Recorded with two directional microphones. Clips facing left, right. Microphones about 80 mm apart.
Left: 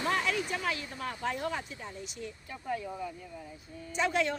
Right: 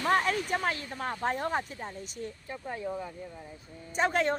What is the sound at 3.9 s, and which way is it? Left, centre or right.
Speech, right.